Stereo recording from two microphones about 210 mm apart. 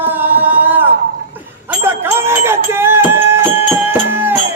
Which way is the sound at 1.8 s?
10° right (ahead or behind).